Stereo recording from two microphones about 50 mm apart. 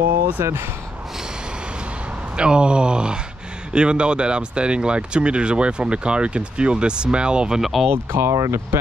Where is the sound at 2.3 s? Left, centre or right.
Centre.